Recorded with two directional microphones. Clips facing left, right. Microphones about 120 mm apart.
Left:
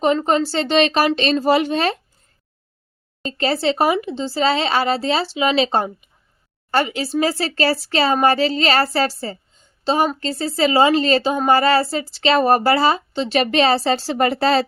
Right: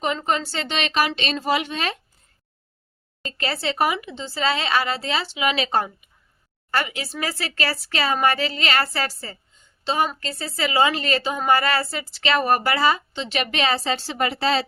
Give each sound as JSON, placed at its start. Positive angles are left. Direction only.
{"t": 0.2, "sound": "a woman's voice", "side_deg": 35}
{"t": 3.2, "sound": "a woman's voice", "side_deg": 30}